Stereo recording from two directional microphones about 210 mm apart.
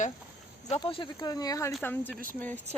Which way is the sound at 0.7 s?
25° left (ahead or behind).